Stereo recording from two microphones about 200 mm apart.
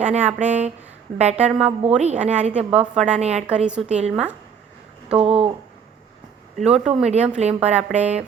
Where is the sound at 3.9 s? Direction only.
35° right (ahead or behind).